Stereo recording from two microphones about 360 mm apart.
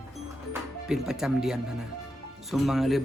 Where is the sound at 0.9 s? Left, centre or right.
Centre.